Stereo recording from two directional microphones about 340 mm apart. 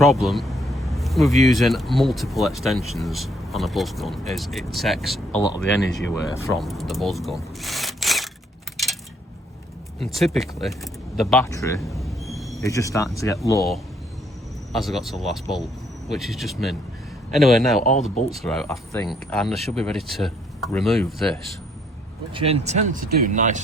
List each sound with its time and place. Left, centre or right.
0.0 s speech: centre
10.0 s a man's voice: centre
22.4 s speech: centre